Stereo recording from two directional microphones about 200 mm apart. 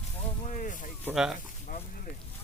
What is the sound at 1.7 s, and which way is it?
Speech, 45° left (ahead or behind).